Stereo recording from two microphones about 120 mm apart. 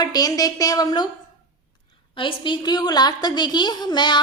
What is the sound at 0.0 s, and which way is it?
A woman's voice, 35° left (ahead or behind).